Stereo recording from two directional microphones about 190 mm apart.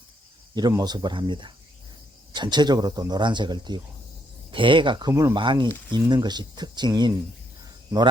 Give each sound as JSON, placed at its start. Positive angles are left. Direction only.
{"t": 0.5, "sound": "speech", "side_deg": -20}
{"t": 7.6, "sound": "cricket", "side_deg": -20}